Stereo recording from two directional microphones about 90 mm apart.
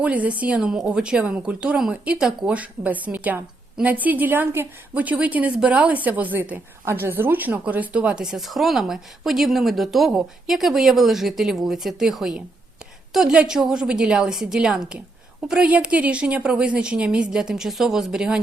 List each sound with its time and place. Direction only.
0.0 s a woman's voice: 15° right (ahead or behind)